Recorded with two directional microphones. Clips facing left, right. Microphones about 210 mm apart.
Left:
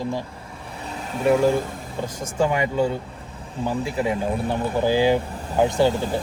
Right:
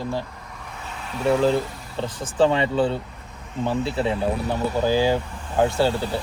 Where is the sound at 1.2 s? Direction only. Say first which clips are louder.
Left 1 dB; 15° left (ahead or behind).